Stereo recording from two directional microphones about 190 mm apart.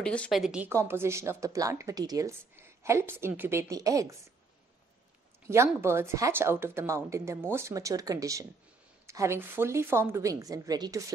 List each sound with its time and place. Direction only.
0.0 s speech: 5° left (ahead or behind); by 4.2 s 15° right (ahead or behind)
5.7 s speech: 15° right (ahead or behind)